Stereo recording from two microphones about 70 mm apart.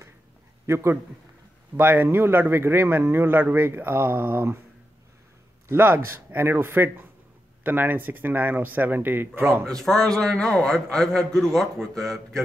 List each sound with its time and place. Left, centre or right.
0.7 s a man's voice: right
5.7 s a man's voice: right
9.7 s a man's voice: centre